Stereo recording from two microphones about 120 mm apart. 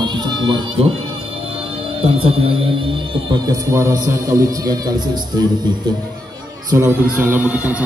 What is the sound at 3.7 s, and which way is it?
A man's voice, 25° right (ahead or behind).